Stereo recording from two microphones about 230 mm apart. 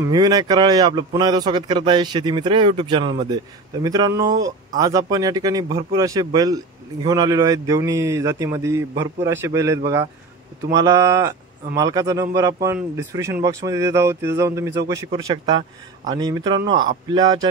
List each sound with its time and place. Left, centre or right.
0.0 s a man's voice: centre